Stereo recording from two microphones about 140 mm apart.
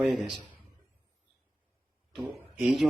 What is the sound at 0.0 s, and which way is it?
Speech, centre (ahead or behind).